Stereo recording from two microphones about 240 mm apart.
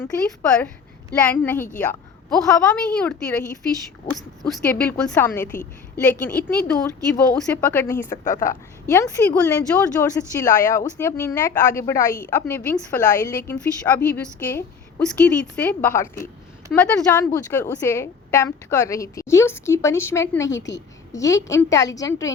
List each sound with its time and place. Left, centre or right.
0.0 s a woman's voice: centre
4.4 s a woman's voice: centre
8.1 s speech: left
8.4 s a woman's voice: centre